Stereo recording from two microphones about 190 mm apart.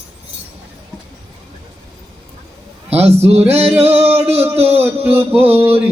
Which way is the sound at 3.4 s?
10° right (ahead or behind).